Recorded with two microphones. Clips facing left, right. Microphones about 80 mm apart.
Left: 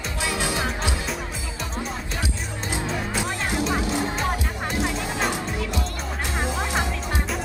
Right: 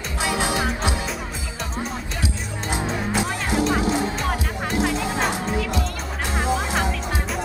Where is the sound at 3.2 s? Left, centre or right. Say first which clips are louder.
Right 4 dB; right.